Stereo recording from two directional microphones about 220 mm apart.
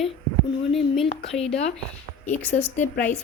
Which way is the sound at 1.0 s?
25° left (ahead or behind).